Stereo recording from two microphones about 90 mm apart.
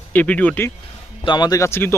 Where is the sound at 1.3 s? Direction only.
50° left (ahead or behind).